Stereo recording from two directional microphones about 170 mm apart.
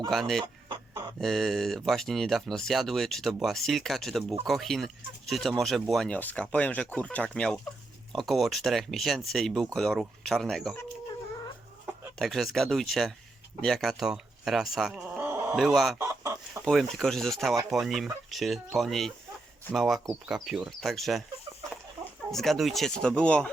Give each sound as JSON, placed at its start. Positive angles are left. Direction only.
{"t": 0.1, "sound": "speech", "side_deg": 0}
{"t": 0.4, "sound": "chicken", "side_deg": -25}
{"t": 1.2, "sound": "speech", "side_deg": 0}
{"t": 12.2, "sound": "speech", "side_deg": 0}
{"t": 15.5, "sound": "speech", "side_deg": 0}
{"t": 16.0, "sound": "chicken", "side_deg": -15}
{"t": 16.6, "sound": "speech", "side_deg": 0}
{"t": 22.3, "sound": "speech", "side_deg": 0}